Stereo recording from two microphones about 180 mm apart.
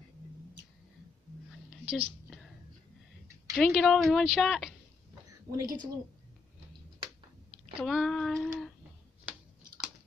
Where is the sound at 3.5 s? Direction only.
Centre (ahead or behind).